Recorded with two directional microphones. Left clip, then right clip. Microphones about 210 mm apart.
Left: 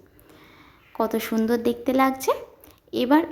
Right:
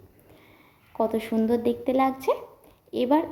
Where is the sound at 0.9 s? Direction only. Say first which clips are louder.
Left 1 dB; 55° left (ahead or behind).